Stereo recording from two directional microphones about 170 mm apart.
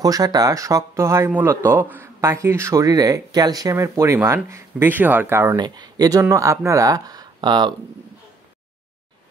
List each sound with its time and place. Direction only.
0.0 s speech: 20° right (ahead or behind)